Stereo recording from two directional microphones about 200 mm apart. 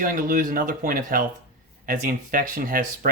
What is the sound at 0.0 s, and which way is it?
Speech, 45° right (ahead or behind).